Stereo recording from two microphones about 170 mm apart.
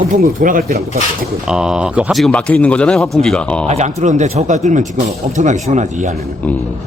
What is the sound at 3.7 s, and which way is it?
Speech, 40° right (ahead or behind).